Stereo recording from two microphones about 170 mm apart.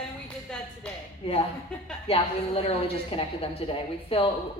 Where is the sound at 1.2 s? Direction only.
35° left (ahead or behind).